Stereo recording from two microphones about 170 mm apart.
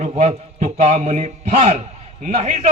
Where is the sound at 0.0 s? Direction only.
40° right (ahead or behind).